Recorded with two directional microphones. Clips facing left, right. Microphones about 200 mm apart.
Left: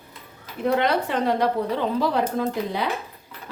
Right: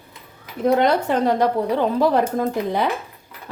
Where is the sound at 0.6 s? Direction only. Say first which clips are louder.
Right 4 dB; 45° right (ahead or behind).